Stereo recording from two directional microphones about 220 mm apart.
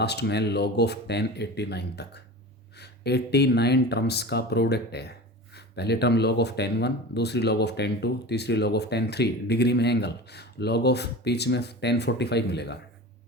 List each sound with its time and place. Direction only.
0.0 s speech: 50° left (ahead or behind)